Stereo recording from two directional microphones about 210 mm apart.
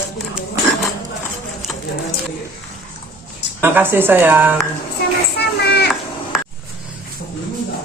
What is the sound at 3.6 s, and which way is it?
Speech, 10° right (ahead or behind).